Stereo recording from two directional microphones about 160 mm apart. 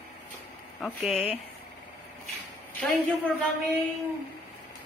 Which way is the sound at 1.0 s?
10° right (ahead or behind).